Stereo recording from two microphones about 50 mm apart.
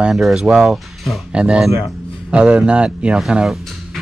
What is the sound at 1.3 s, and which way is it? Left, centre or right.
Speech, right.